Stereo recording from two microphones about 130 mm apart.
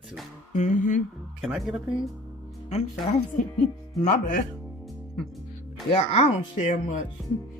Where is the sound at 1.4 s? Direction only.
Centre (ahead or behind).